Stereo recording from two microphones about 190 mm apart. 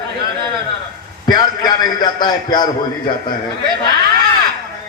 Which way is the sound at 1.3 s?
20° left (ahead or behind).